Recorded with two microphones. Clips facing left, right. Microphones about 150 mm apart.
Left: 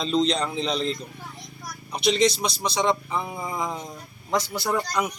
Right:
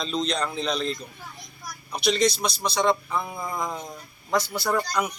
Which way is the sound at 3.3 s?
10° left (ahead or behind).